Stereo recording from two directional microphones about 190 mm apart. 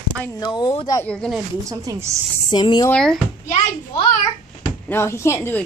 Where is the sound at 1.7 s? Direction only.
15° right (ahead or behind).